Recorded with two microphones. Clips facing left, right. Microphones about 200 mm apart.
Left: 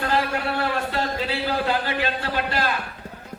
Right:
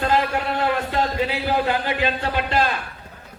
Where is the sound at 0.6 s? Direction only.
20° right (ahead or behind).